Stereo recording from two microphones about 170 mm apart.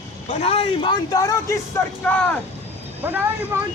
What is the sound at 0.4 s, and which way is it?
Speech, 35° left (ahead or behind).